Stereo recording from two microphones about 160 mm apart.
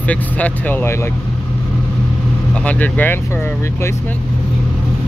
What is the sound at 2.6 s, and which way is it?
Speech, 10° left (ahead or behind).